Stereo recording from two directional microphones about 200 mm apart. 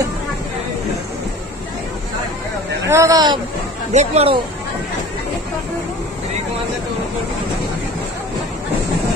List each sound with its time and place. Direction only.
2.9 s speech: 15° right (ahead or behind)
3.9 s speech: 35° right (ahead or behind)